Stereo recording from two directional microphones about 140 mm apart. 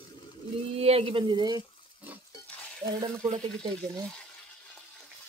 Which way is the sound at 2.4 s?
10° left (ahead or behind).